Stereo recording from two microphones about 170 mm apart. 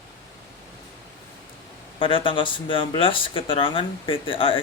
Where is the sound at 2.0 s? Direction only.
30° left (ahead or behind).